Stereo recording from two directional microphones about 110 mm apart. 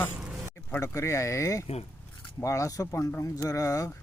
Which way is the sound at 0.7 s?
25° left (ahead or behind).